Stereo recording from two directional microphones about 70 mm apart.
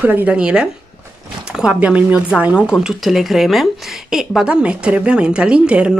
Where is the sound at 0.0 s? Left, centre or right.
Right.